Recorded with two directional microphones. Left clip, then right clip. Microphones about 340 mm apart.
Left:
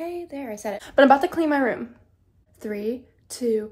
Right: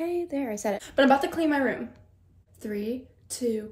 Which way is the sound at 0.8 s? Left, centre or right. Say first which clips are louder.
Left 6 dB; centre.